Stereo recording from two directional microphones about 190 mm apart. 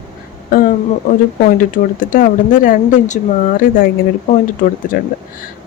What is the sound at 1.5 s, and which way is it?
Speech, 45° left (ahead or behind).